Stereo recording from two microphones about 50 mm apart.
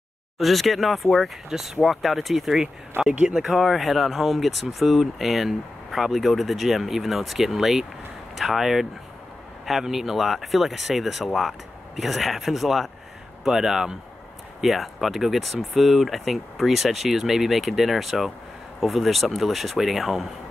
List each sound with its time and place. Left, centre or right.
0.4 s speech: centre
2.9 s speech: right
3.3 s speech: centre